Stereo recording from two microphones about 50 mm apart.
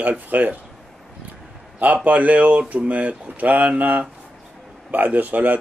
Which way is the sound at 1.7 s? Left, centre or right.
Right.